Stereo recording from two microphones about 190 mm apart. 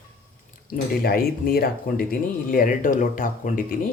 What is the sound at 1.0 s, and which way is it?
Speech, 50° left (ahead or behind).